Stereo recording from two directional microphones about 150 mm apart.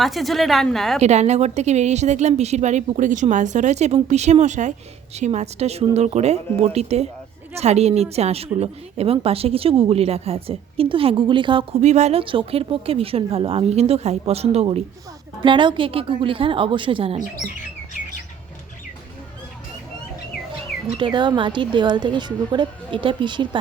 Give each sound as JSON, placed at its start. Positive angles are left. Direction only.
{"t": 0.0, "sound": "a woman's voice", "side_deg": 0}
{"t": 1.0, "sound": "a woman's voice", "side_deg": -50}
{"t": 11.8, "sound": "a woman's voice", "side_deg": -50}
{"t": 12.2, "sound": "speech", "side_deg": -35}
{"t": 15.4, "sound": "speech", "side_deg": -30}
{"t": 21.0, "sound": "speech", "side_deg": -30}